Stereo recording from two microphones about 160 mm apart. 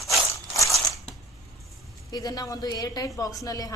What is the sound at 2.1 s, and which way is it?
Speech, 25° left (ahead or behind).